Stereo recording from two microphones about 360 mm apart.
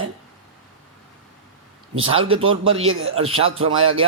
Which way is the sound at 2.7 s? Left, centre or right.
Right.